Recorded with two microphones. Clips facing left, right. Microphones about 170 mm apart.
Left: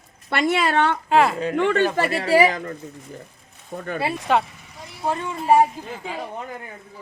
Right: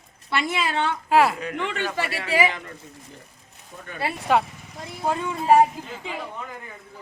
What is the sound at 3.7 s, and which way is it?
Speech, 55° left (ahead or behind).